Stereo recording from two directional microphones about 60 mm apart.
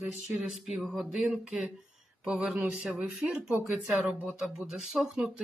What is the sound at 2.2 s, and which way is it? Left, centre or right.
Speech, centre.